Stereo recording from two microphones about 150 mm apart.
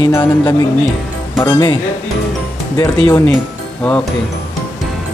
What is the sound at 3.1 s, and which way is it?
Speech, 20° left (ahead or behind).